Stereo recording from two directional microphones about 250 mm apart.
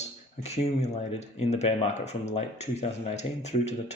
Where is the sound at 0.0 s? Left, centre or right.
Left.